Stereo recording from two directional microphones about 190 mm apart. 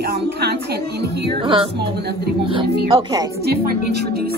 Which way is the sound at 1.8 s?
60° right (ahead or behind).